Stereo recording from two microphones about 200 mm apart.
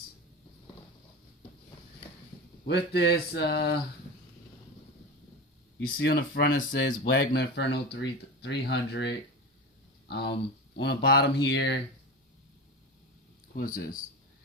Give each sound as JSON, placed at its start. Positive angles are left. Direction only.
{"t": 2.6, "sound": "speech", "side_deg": 55}
{"t": 5.8, "sound": "speech", "side_deg": 55}
{"t": 13.6, "sound": "speech", "side_deg": 45}